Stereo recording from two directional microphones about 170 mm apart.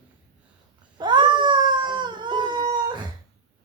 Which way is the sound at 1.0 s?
25° right (ahead or behind).